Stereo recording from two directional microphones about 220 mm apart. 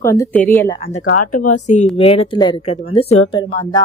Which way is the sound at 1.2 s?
90° left.